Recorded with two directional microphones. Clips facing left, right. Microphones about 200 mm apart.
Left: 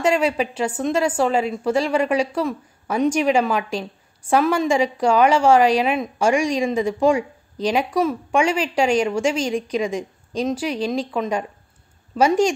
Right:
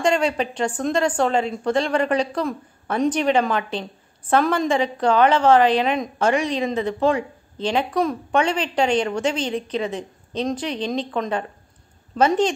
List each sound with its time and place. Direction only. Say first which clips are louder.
0.0 s a woman's voice: left 1 dB; 5° left (ahead or behind)